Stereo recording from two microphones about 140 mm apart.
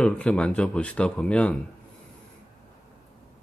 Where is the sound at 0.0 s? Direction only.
10° left (ahead or behind).